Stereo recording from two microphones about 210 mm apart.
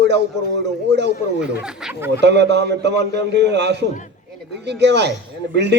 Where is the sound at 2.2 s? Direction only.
55° right (ahead or behind).